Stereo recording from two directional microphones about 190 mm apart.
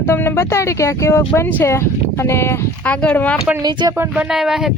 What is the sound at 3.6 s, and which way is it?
Speech, 20° right (ahead or behind).